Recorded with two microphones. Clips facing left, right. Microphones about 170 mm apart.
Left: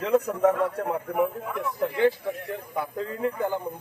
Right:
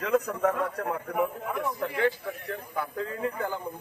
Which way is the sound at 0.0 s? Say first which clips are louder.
Left 4 dB; 25° left (ahead or behind).